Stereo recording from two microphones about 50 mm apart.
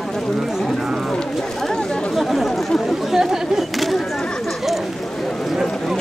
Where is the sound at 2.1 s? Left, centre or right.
Centre.